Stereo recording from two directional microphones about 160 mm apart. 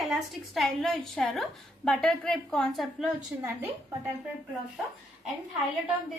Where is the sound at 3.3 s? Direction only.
10° right (ahead or behind).